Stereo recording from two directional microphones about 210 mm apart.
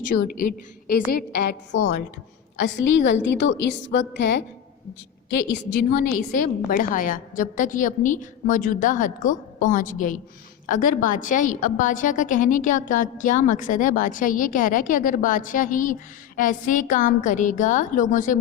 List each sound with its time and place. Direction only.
0.2 s a woman's voice: 45° left (ahead or behind)
6.7 s a woman's voice: 40° left (ahead or behind)